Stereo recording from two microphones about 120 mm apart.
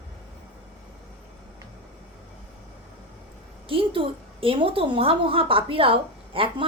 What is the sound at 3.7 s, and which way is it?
A woman's voice, 50° right (ahead or behind).